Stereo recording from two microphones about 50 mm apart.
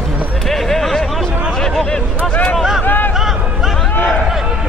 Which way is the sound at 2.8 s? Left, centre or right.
Left.